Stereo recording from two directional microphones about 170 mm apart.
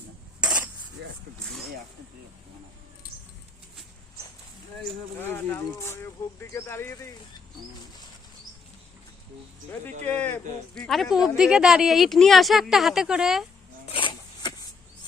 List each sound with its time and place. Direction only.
0.4 s cutlery: 5° right (ahead or behind)
1.0 s vehicle: 90° right
3.1 s a sound: 60° left (ahead or behind)
5.2 s speech: 10° left (ahead or behind)
10.1 s a man's voice: 10° left (ahead or behind)
13.9 s a sound: 30° left (ahead or behind)